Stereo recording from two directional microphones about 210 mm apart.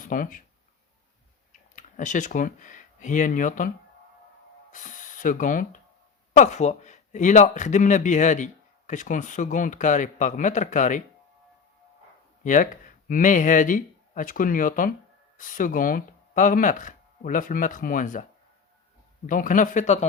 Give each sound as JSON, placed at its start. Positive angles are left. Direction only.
{"t": 0.0, "sound": "speech", "side_deg": 40}
{"t": 1.7, "sound": "speech", "side_deg": 35}
{"t": 4.7, "sound": "speech", "side_deg": 35}
{"t": 12.4, "sound": "speech", "side_deg": 40}